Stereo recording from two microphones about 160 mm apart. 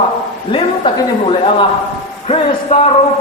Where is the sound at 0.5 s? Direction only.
30° left (ahead or behind).